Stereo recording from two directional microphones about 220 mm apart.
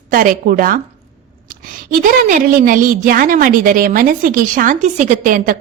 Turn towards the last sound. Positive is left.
turn(degrees=-40)  # may be behind; listen again after turning